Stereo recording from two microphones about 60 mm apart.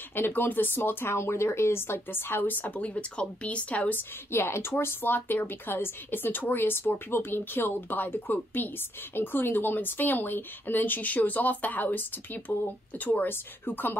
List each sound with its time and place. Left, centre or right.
0.1 s speech: left
1.1 s speech: left
2.7 s speech: left
4.3 s speech: left